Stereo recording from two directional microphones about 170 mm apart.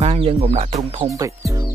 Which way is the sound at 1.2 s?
20° right (ahead or behind).